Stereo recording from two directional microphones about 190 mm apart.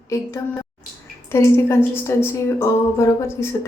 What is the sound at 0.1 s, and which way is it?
Speech, 15° left (ahead or behind).